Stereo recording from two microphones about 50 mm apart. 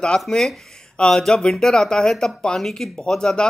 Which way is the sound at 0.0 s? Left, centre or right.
Centre.